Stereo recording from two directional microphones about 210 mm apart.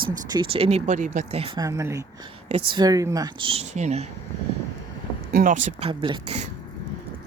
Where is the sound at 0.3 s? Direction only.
25° right (ahead or behind).